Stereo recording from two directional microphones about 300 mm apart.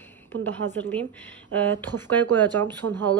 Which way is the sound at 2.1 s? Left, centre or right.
Centre.